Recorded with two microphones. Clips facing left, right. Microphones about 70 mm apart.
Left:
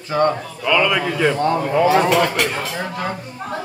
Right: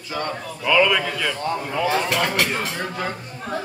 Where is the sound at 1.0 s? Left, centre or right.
Left.